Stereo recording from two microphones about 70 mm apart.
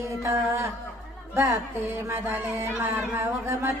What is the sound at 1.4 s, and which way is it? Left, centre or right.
Music, right.